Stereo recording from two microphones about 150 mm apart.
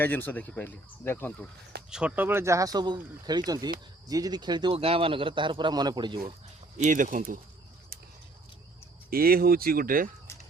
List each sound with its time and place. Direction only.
0.0 s speech: 10° left (ahead or behind)
1.9 s a man's voice: 5° right (ahead or behind); by 6.3 s 30° right (ahead or behind)
6.7 s speech: 55° right (ahead or behind)
9.0 s speech: 85° right; by 10.1 s 70° right (ahead or behind)